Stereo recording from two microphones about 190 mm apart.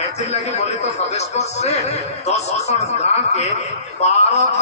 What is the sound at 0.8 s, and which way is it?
A man's voice, 35° left (ahead or behind).